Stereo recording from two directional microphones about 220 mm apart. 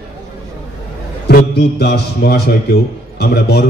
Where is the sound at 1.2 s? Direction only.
50° left (ahead or behind).